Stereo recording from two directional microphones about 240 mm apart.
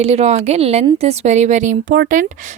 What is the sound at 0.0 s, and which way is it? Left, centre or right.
Speech, right.